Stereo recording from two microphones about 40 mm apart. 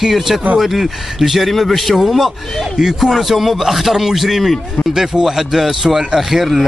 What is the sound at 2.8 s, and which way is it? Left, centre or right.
Speech, centre.